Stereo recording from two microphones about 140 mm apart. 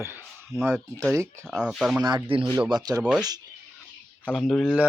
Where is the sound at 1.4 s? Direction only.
5° right (ahead or behind).